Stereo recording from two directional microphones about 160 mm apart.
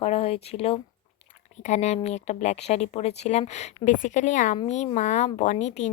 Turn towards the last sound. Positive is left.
turn(degrees=45)  # may be behind; listen again after turning